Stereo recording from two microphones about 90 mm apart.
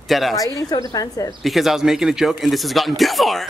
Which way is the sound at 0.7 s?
45° left (ahead or behind).